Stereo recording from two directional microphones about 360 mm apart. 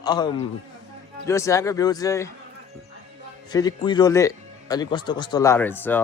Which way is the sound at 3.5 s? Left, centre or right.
Centre.